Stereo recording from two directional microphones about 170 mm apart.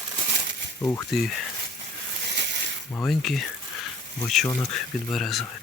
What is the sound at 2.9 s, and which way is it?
Speech, 5° left (ahead or behind).